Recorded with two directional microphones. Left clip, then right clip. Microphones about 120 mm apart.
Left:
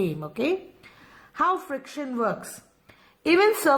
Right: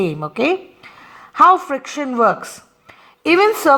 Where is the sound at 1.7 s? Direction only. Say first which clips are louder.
Right 10 dB; 55° right (ahead or behind).